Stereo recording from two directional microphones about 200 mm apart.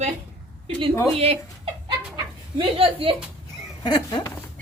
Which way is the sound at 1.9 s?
25° right (ahead or behind).